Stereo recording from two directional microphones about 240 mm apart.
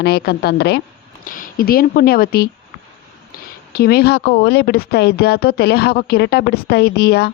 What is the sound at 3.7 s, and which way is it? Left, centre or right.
Speech, left.